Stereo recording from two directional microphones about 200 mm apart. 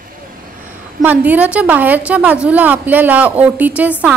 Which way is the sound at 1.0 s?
10° right (ahead or behind).